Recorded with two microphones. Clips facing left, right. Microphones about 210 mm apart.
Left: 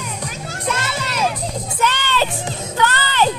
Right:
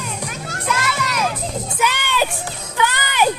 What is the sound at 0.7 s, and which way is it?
Crowd, 30° left (ahead or behind).